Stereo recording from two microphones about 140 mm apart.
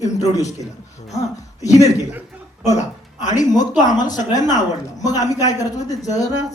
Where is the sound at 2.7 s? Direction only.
55° left (ahead or behind).